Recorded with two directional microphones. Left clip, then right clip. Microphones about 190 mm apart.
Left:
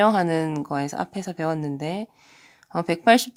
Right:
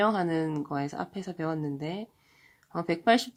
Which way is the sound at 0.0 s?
30° left (ahead or behind).